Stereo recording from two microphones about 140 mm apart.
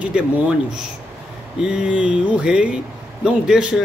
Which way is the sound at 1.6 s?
5° right (ahead or behind).